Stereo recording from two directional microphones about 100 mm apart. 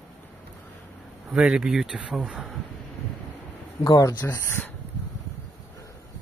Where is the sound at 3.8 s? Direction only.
40° left (ahead or behind).